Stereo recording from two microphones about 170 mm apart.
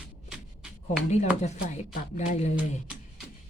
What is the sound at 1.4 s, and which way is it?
Speech, 40° left (ahead or behind).